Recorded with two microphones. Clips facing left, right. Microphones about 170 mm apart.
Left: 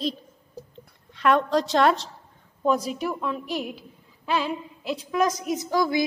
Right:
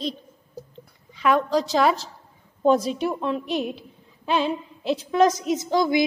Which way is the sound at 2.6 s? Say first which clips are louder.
Right 4 dB; 25° right (ahead or behind).